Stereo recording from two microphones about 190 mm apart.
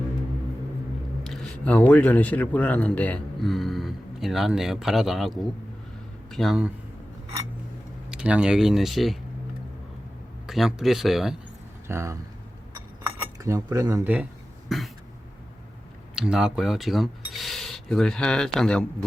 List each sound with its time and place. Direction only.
1.2 s speech: centre (ahead or behind)
6.3 s speech: centre (ahead or behind)
8.1 s speech: 5° right (ahead or behind)
10.4 s speech: centre (ahead or behind)
11.9 s speech: 15° right (ahead or behind)
13.4 s speech: 15° right (ahead or behind); by 14.8 s centre (ahead or behind)
16.1 s speech: 5° right (ahead or behind)